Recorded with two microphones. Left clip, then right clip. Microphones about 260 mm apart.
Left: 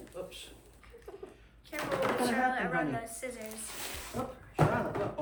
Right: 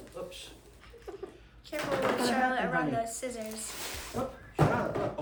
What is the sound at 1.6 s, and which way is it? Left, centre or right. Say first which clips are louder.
Speech: right 2 dB; centre.